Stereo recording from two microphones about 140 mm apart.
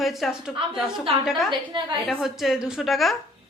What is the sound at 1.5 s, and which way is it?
Speech, 35° right (ahead or behind).